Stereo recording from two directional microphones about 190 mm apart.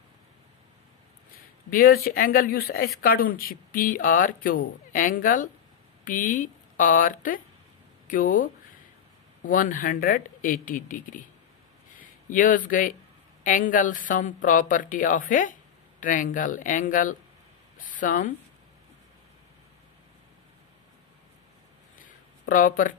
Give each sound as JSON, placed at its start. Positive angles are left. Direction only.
{"t": 1.3, "sound": "speech", "side_deg": 50}
{"t": 22.5, "sound": "speech", "side_deg": 45}